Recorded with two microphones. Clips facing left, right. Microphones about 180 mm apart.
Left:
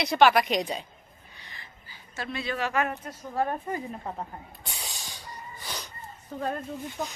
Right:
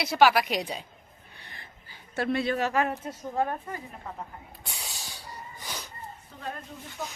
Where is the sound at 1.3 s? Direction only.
55° right (ahead or behind); by 2.9 s 35° right (ahead or behind).